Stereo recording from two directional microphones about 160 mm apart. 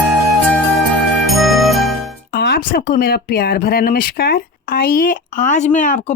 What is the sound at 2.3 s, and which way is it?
Speech, 70° left (ahead or behind).